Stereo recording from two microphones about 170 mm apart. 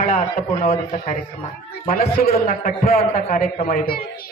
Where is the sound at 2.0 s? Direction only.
60° left (ahead or behind).